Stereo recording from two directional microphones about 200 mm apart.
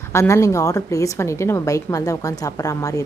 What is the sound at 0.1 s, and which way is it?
A woman's voice, 15° left (ahead or behind).